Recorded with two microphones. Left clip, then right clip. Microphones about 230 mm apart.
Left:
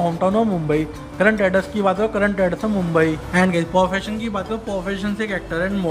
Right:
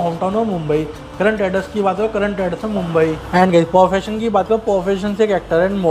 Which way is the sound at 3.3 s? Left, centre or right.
Centre.